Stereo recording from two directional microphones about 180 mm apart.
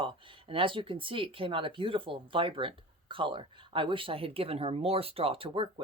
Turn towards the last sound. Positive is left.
turn(degrees=-30)  # may be behind; listen again after turning